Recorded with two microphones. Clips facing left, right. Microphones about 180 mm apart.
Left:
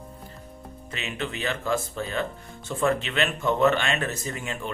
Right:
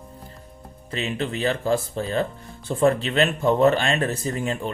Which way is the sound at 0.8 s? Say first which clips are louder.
Right 6 dB; 35° right (ahead or behind).